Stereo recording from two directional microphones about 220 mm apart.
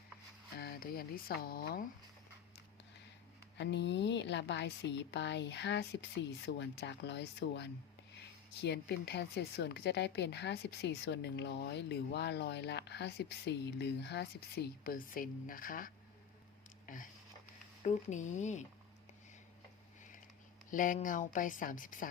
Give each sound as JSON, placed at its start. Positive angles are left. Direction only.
{"t": 0.6, "sound": "speech", "side_deg": 45}
{"t": 3.6, "sound": "speech", "side_deg": 50}
{"t": 16.8, "sound": "a sound", "side_deg": 35}
{"t": 17.8, "sound": "a woman's voice", "side_deg": 35}
{"t": 20.7, "sound": "a woman's voice", "side_deg": 35}